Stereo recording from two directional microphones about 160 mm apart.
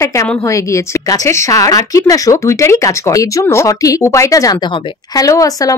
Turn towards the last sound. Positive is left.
turn(degrees=20)  # may be behind; listen again after turning